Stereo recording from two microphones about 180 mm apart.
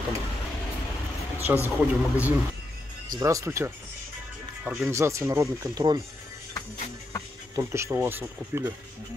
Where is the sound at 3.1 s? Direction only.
15° right (ahead or behind).